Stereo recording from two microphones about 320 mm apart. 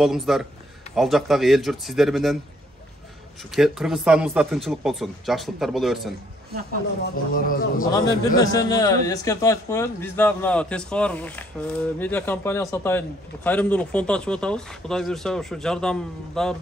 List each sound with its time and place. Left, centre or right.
0.0 s a man's voice: centre
3.5 s a man's voice: centre
7.3 s a man's voice: left
8.4 s a man's voice: centre